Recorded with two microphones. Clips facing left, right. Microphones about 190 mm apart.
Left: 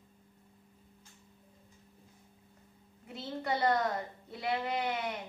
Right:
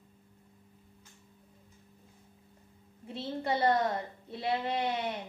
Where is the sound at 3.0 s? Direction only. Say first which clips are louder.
Right 2 dB; 25° right (ahead or behind).